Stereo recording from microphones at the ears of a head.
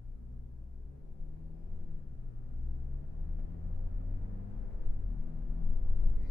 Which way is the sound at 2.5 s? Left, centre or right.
Left.